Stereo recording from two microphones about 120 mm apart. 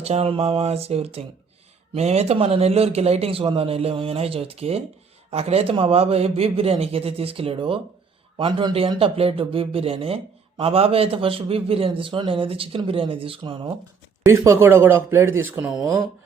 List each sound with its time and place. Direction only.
0.0 s a man's voice: 60° right (ahead or behind)
14.3 s speech: 25° right (ahead or behind)